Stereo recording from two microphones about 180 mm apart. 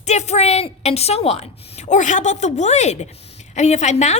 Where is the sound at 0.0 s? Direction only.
40° left (ahead or behind).